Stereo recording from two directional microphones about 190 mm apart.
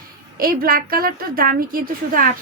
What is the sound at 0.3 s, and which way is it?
A woman's voice, 50° right (ahead or behind).